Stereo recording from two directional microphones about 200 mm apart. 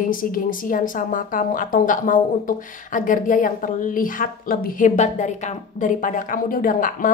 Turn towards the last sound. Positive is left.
turn(degrees=45)  # may be behind; listen again after turning